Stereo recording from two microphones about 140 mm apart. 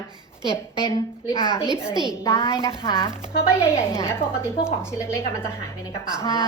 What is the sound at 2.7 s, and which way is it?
Speech, 40° left (ahead or behind).